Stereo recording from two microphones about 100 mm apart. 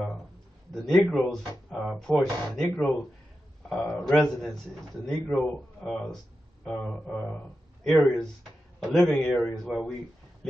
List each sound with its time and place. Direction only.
0.7 s speech: 5° left (ahead or behind)
6.7 s mantra: 15° left (ahead or behind)
7.8 s speech: centre (ahead or behind)